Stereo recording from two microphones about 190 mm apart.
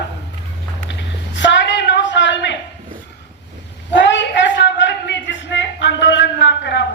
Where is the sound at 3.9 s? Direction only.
70° left (ahead or behind).